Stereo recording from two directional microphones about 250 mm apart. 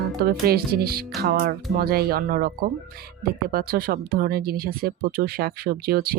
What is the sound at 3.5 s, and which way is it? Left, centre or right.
Music, right.